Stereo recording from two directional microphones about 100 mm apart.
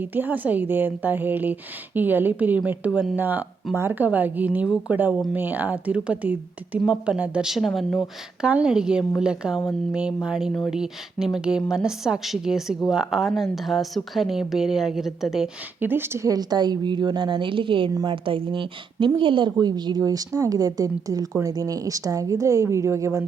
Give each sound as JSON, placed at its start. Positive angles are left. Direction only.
{"t": 0.0, "sound": "a woman's voice", "side_deg": -20}
{"t": 8.4, "sound": "a woman's voice", "side_deg": -10}
{"t": 15.8, "sound": "a woman's voice", "side_deg": -20}